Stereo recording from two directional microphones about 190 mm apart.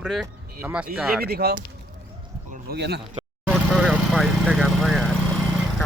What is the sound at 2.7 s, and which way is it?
Speech, 60° right (ahead or behind).